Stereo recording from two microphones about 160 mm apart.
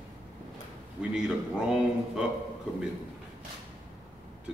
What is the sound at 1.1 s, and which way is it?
A man's voice, 5° right (ahead or behind).